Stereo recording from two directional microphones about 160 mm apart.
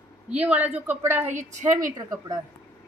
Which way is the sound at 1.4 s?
50° right (ahead or behind).